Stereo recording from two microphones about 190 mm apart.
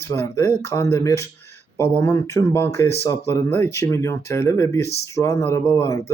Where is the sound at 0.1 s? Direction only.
15° left (ahead or behind).